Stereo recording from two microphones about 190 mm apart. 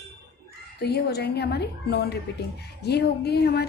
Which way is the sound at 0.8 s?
60° left (ahead or behind).